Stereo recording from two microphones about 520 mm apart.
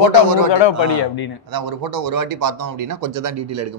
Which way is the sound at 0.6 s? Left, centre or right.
Left.